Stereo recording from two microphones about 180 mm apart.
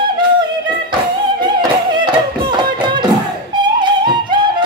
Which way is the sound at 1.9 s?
25° right (ahead or behind).